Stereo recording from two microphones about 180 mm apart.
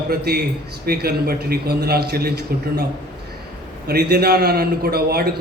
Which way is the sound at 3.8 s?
60° right (ahead or behind).